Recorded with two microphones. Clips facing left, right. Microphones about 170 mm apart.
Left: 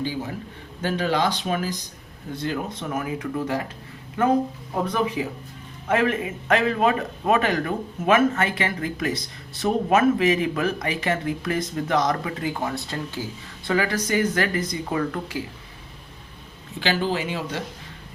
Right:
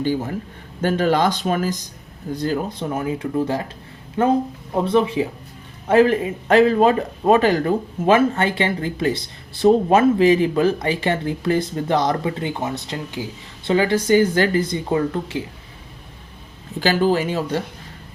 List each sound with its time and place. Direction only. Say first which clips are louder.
0.0 s speech: right 6 dB; 50° right (ahead or behind); by 15.4 s 25° right (ahead or behind)
16.8 s speech: right 6 dB; 40° right (ahead or behind)